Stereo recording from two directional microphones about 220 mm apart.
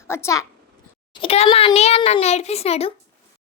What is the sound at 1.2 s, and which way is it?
A child's voice, 25° left (ahead or behind).